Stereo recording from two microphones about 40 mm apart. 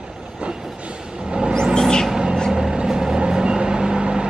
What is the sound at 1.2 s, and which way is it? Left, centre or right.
Vehicle, right.